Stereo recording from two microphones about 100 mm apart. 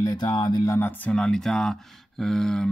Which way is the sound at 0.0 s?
40° left (ahead or behind).